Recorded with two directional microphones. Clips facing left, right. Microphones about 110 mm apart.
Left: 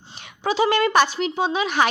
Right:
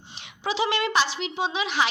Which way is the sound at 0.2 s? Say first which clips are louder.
Left 5 dB; 45° left (ahead or behind).